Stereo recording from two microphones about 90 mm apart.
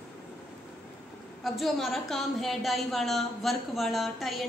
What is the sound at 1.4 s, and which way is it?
A woman's voice, centre (ahead or behind).